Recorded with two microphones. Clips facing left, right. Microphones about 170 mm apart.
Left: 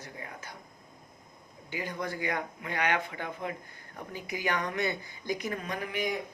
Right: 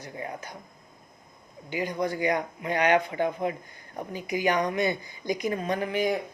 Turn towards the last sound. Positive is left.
turn(degrees=-30)  # may be behind; listen again after turning